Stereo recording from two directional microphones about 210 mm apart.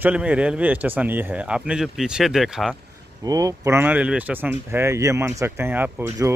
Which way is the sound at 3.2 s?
15° right (ahead or behind).